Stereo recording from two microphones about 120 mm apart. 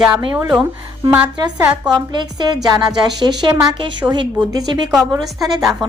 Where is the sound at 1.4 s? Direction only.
35° right (ahead or behind).